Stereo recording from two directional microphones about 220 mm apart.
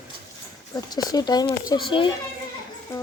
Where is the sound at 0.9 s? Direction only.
15° left (ahead or behind).